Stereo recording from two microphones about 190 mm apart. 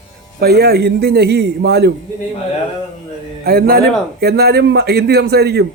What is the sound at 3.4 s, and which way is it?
A man's voice, 50° right (ahead or behind).